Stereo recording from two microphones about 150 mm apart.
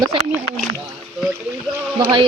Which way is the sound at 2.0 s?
30° right (ahead or behind).